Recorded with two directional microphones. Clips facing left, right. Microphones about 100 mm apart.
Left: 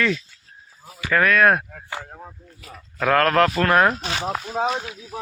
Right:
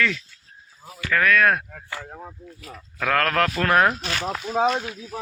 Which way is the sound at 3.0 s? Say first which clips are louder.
Left 4 dB; 10° left (ahead or behind).